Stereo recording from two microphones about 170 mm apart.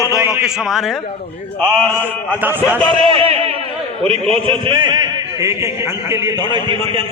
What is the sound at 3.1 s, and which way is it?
A man's voice, 35° right (ahead or behind).